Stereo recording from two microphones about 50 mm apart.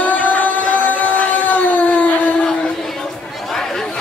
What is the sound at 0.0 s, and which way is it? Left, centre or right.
Music, left.